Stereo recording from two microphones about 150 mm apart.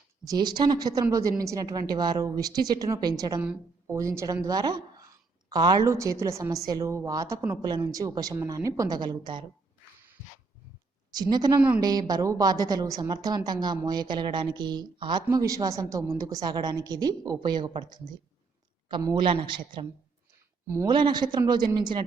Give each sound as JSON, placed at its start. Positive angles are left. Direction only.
{"t": 0.3, "sound": "a woman's voice", "side_deg": -30}
{"t": 11.1, "sound": "a woman's voice", "side_deg": -25}
{"t": 19.1, "sound": "a woman's voice", "side_deg": -35}